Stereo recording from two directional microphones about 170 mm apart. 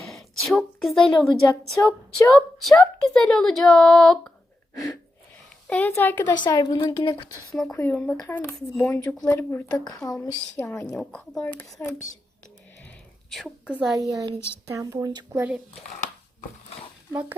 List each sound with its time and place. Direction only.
0.1 s a woman's voice: centre (ahead or behind)
5.6 s speech: 10° left (ahead or behind)
6.4 s a woman's voice: 25° left (ahead or behind)
7.5 s speech: 5° left (ahead or behind)
9.6 s a woman's voice: 25° left (ahead or behind)
10.8 s a woman's voice: 5° left (ahead or behind)
13.3 s a woman's voice: 5° right (ahead or behind)
14.1 s a woman's voice: 20° right (ahead or behind)
16.0 s a sound: 45° left (ahead or behind)